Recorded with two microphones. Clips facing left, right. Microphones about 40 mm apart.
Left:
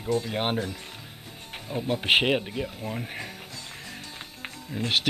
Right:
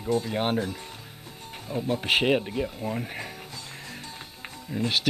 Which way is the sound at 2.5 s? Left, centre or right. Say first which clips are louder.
Right 3 dB; centre.